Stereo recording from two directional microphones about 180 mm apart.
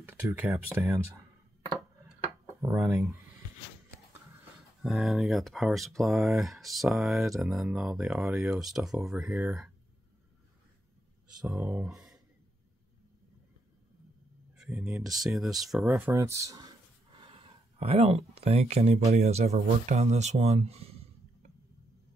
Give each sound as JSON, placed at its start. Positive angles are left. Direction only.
{"t": 0.0, "sound": "speech", "side_deg": -10}
{"t": 2.6, "sound": "speech", "side_deg": -15}
{"t": 4.8, "sound": "speech", "side_deg": 0}
{"t": 11.4, "sound": "speech", "side_deg": -10}
{"t": 14.6, "sound": "speech", "side_deg": -5}
{"t": 15.8, "sound": "speech", "side_deg": -15}
{"t": 17.2, "sound": "speech", "side_deg": -30}